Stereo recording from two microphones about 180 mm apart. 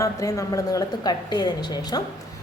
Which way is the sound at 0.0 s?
20° left (ahead or behind).